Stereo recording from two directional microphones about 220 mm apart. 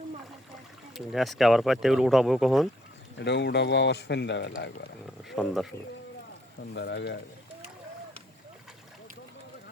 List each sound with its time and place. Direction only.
0.9 s speech: centre (ahead or behind)
3.2 s speech: 50° left (ahead or behind)
5.3 s speech: centre (ahead or behind)
6.7 s speech: 50° left (ahead or behind)